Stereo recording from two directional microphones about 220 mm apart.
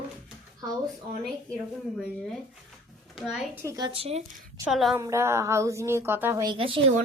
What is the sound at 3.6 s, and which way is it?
Speech, 15° right (ahead or behind).